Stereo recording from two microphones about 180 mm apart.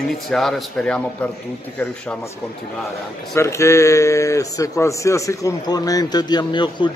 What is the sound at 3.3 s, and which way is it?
Speech, 15° left (ahead or behind).